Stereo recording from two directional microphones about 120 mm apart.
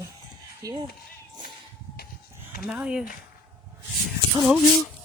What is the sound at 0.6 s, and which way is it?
Speech, 40° right (ahead or behind).